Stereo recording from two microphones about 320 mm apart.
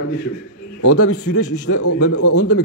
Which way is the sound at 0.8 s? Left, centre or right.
Left.